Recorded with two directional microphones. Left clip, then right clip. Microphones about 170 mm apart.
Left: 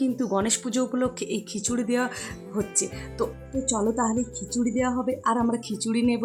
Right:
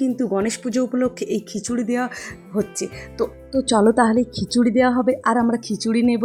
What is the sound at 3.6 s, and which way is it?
A woman's voice, 35° right (ahead or behind).